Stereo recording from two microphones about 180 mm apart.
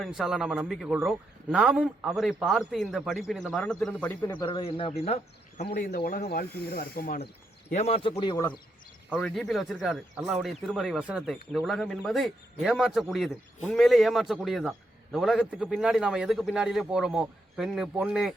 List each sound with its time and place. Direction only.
0.0 s a man's voice: centre (ahead or behind)
4.4 s speech: 30° left (ahead or behind)
5.6 s speech: 50° left (ahead or behind)
7.7 s speech: 40° left (ahead or behind)
9.1 s a man's voice: 5° left (ahead or behind)